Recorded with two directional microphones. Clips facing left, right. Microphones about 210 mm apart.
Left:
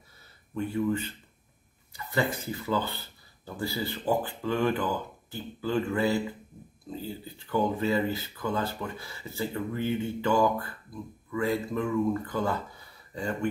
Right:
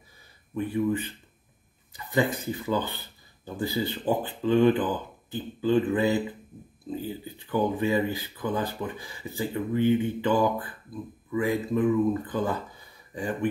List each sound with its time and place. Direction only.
0.6 s speech: 15° right (ahead or behind)